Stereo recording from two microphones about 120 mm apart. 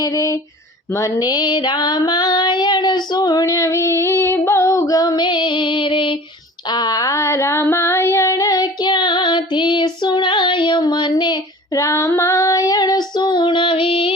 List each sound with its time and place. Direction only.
0.0 s a sound: 25° left (ahead or behind)
0.9 s female singing: 30° left (ahead or behind); by 6.1 s 45° left (ahead or behind)
6.7 s child singing: 35° left (ahead or behind)
11.8 s female singing: 25° left (ahead or behind); by 14.2 s 50° left (ahead or behind)